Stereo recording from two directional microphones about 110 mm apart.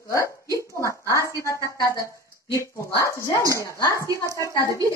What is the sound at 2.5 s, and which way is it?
Speech, 30° left (ahead or behind).